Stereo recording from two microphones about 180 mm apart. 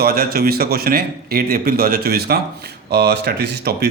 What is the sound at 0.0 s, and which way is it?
Speech, 55° right (ahead or behind).